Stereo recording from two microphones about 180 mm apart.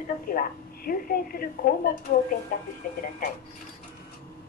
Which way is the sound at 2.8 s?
50° left (ahead or behind).